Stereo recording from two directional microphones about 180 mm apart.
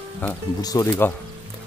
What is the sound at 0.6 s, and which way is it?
Speech, 20° left (ahead or behind).